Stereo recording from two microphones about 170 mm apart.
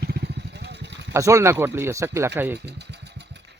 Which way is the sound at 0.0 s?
75° right (ahead or behind).